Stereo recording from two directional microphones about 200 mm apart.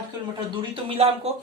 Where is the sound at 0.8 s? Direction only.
30° right (ahead or behind).